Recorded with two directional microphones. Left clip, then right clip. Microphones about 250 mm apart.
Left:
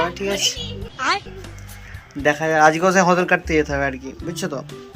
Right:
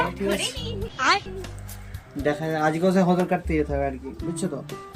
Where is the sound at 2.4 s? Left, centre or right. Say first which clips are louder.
Left 13 dB; centre.